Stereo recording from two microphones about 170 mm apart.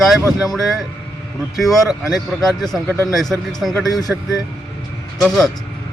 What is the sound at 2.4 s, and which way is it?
Speech, centre (ahead or behind).